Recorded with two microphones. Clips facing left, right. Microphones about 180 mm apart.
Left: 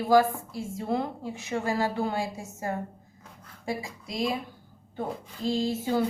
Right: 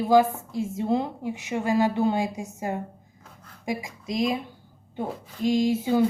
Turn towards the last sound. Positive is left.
turn(degrees=-15)  # may be behind; listen again after turning